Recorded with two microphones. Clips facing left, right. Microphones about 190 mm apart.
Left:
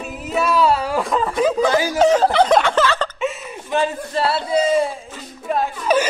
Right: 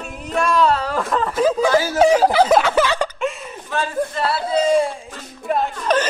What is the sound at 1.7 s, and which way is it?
Speech, 15° left (ahead or behind).